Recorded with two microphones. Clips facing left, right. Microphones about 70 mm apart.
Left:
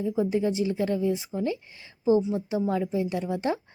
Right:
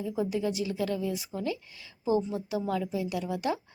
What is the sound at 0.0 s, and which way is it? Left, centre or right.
Speech, left.